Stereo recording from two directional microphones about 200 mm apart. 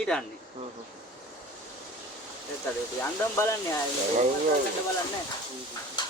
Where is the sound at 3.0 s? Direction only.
10° left (ahead or behind).